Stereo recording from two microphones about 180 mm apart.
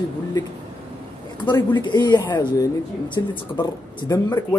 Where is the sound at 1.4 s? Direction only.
25° left (ahead or behind).